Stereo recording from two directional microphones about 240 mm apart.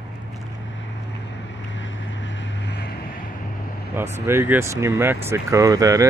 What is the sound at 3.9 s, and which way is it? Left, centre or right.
Speech, centre.